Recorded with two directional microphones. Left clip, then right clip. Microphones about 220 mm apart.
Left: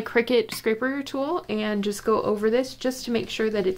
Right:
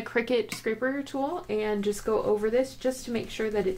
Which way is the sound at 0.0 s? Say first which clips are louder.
Left 5 dB; 25° left (ahead or behind).